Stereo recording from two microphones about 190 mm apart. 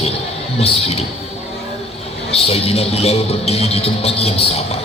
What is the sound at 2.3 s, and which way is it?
A man's voice, 30° left (ahead or behind).